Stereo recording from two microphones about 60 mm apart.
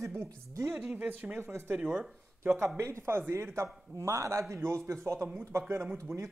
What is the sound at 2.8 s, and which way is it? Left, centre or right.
Speech, right.